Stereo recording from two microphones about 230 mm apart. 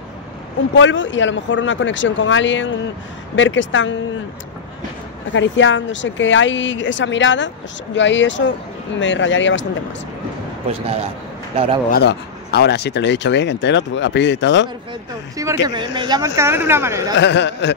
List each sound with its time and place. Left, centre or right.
0.7 s speech: left
5.3 s speech: left
10.7 s a man's voice: right
11.9 s speech: left
15.6 s speech: centre
17.1 s speech: left